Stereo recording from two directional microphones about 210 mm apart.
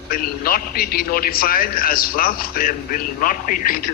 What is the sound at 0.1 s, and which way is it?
A man's voice, 45° left (ahead or behind).